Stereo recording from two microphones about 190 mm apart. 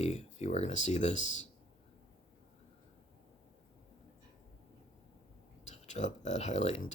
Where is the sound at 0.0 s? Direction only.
35° left (ahead or behind).